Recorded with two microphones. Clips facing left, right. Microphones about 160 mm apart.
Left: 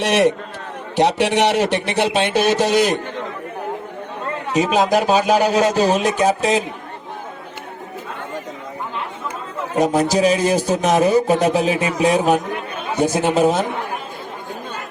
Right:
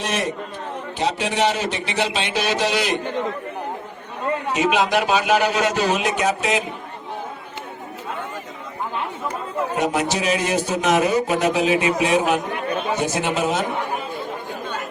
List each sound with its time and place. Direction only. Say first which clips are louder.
0.0 s a man's voice: left 8 dB; 75° left (ahead or behind); by 3.0 s 45° left (ahead or behind)
4.5 s speech: left 4 dB; 40° left (ahead or behind)
9.7 s speech: left 7 dB; 40° left (ahead or behind)